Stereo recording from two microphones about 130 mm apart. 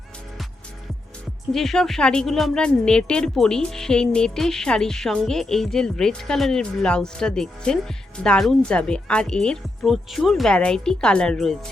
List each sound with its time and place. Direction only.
1.5 s a woman's voice: 5° left (ahead or behind)